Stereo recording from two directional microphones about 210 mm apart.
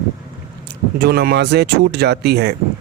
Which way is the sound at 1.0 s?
50° right (ahead or behind).